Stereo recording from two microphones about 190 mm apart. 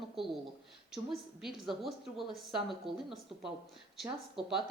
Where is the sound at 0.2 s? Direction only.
Centre (ahead or behind).